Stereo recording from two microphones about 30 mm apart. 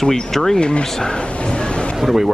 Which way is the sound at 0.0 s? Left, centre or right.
Centre.